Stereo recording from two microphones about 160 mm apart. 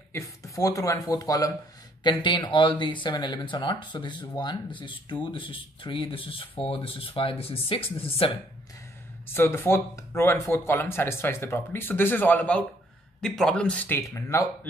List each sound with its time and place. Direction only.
0.1 s speech: 20° left (ahead or behind); by 8.3 s 35° left (ahead or behind)
9.3 s speech: 15° left (ahead or behind)